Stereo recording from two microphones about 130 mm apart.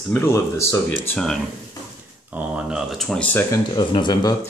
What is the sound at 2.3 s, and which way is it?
Speech, 10° right (ahead or behind).